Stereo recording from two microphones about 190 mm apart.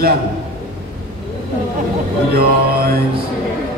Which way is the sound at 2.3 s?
55° right (ahead or behind).